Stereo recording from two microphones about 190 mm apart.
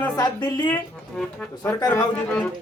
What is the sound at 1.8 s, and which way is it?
Speech, 20° left (ahead or behind).